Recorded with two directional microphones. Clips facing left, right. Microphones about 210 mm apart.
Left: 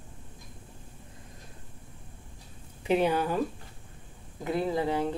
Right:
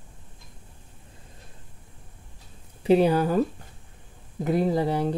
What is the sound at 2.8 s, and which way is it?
Speech, 35° right (ahead or behind).